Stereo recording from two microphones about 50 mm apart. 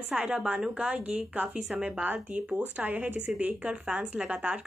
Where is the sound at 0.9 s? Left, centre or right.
Right.